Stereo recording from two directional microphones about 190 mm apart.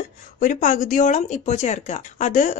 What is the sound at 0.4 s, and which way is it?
Speech, 40° left (ahead or behind).